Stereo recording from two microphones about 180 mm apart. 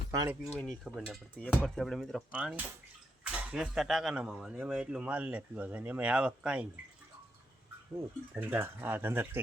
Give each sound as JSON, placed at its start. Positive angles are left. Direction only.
{"t": 0.1, "sound": "speech", "side_deg": -20}
{"t": 0.9, "sound": "speech", "side_deg": 0}
{"t": 7.9, "sound": "speech", "side_deg": -10}